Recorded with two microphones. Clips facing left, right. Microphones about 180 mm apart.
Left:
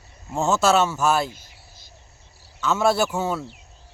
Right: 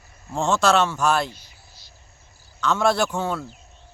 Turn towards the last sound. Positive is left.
turn(degrees=5)  # may be behind; listen again after turning